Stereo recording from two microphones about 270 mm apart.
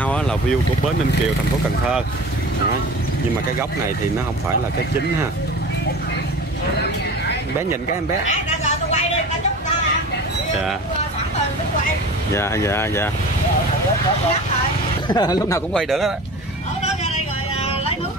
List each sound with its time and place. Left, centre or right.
0.0 s vehicle: centre
8.3 s a sound: left
12.4 s speech: centre
15.0 s speech: centre